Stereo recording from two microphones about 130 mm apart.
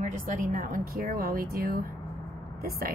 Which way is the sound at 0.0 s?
85° right.